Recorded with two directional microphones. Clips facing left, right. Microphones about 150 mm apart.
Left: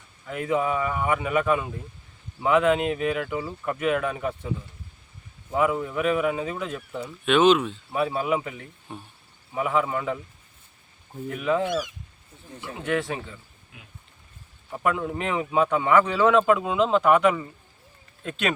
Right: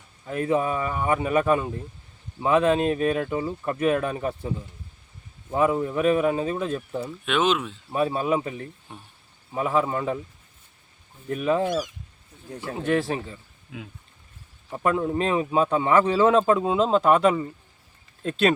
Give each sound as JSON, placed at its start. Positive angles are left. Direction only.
{"t": 0.3, "sound": "a man's voice", "side_deg": -30}
{"t": 5.5, "sound": "a man's voice", "side_deg": -30}
{"t": 7.3, "sound": "speech", "side_deg": 0}
{"t": 7.9, "sound": "a man's voice", "side_deg": -35}
{"t": 8.9, "sound": "speech", "side_deg": 5}
{"t": 9.6, "sound": "a man's voice", "side_deg": -35}
{"t": 11.3, "sound": "a man's voice", "side_deg": -30}
{"t": 14.8, "sound": "a man's voice", "side_deg": -30}